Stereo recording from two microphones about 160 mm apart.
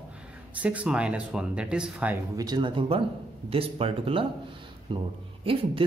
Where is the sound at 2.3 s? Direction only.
25° right (ahead or behind).